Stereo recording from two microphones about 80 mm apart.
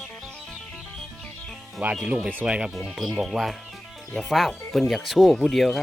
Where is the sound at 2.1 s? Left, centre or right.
Centre.